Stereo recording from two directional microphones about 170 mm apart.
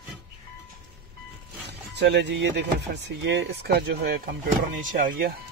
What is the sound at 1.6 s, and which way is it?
Speech, 80° right.